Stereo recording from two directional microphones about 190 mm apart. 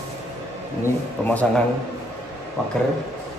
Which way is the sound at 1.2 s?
5° left (ahead or behind).